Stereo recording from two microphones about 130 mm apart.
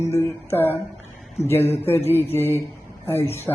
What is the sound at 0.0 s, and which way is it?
Speech, 15° left (ahead or behind).